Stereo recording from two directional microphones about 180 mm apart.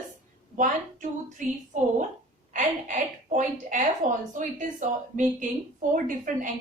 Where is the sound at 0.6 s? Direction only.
45° right (ahead or behind).